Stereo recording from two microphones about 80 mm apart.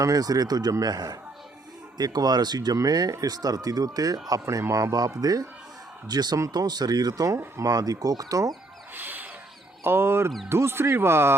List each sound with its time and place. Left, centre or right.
0.0 s speech: right
9.0 s a sound: right
9.8 s speech: right